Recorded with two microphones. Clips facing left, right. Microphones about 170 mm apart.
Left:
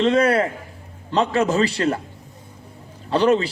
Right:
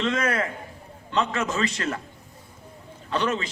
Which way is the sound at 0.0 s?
35° left (ahead or behind).